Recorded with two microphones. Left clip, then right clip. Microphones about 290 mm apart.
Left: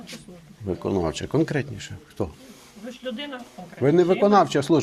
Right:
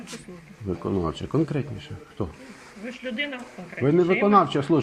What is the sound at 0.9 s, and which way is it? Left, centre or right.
A man's voice, left.